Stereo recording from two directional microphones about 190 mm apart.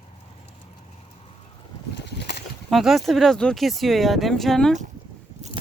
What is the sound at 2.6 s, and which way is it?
Speech, centre (ahead or behind).